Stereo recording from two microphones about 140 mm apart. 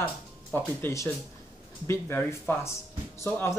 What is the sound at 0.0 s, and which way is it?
Speech, 10° left (ahead or behind).